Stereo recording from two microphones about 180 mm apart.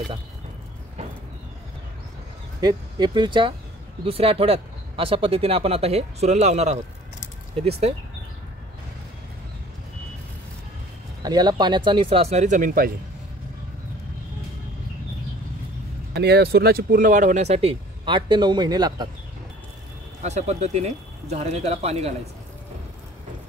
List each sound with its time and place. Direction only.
2.6 s speech: 25° right (ahead or behind)
11.2 s speech: 20° right (ahead or behind); by 12.9 s 50° right (ahead or behind)
16.2 s speech: 65° right (ahead or behind); by 19.0 s 20° right (ahead or behind)
20.2 s speech: 40° right (ahead or behind)